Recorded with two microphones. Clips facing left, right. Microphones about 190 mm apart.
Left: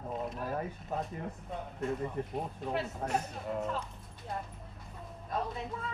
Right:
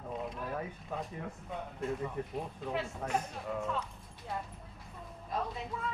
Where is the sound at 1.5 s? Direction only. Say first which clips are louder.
Left 1 dB; centre (ahead or behind).